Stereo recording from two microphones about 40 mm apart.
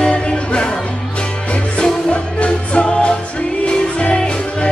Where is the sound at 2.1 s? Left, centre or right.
Left.